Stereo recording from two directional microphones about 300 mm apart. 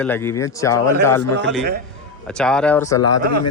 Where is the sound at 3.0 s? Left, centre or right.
Left.